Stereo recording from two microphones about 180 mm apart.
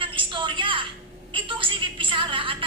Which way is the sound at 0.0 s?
25° right (ahead or behind).